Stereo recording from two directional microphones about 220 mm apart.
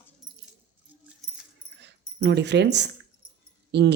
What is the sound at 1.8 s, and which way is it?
Speech, 50° right (ahead or behind).